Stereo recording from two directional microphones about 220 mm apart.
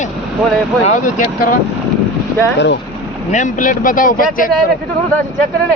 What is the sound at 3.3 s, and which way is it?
Speech, 35° left (ahead or behind).